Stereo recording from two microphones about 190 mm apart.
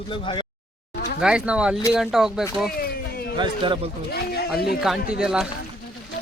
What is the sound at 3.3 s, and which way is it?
Speech, 25° right (ahead or behind).